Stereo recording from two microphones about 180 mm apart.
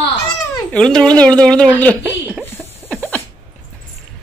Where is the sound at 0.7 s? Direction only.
5° left (ahead or behind).